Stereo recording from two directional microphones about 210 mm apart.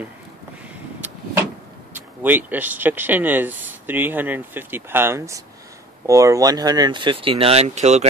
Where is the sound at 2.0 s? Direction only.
10° right (ahead or behind).